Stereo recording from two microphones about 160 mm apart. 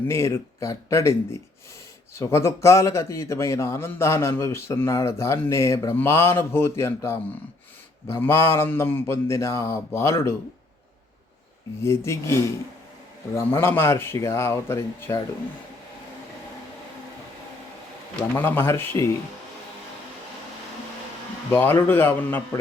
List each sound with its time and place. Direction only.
0.1 s a man's voice: 15° left (ahead or behind)
2.1 s a man's voice: 15° left (ahead or behind)
11.8 s a man's voice: 15° left (ahead or behind)
18.2 s a man's voice: 10° left (ahead or behind)
21.5 s a man's voice: 15° left (ahead or behind)